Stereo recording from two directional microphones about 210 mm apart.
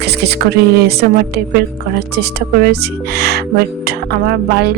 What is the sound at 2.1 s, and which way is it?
Speech, 50° right (ahead or behind).